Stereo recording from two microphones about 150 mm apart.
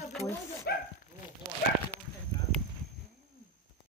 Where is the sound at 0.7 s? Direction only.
90° left.